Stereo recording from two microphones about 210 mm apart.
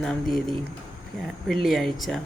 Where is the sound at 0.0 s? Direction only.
Centre (ahead or behind).